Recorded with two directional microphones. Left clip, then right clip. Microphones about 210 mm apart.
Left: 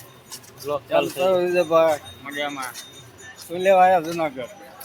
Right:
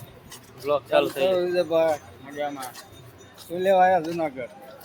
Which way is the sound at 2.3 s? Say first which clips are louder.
Left 2 dB; 10° right (ahead or behind).